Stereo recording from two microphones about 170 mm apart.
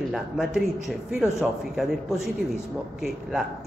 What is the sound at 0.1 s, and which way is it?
A man's voice, centre (ahead or behind).